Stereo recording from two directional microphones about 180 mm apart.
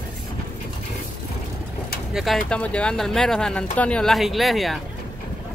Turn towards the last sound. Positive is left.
turn(degrees=0)  # may be behind; listen again after turning